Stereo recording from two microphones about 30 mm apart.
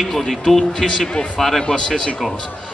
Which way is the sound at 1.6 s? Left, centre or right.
Left.